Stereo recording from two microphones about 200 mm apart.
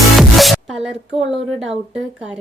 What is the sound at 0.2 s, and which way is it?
Music, centre (ahead or behind).